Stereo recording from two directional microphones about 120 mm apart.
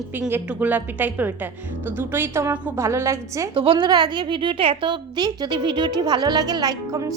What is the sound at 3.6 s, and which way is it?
A woman's voice, 45° right (ahead or behind).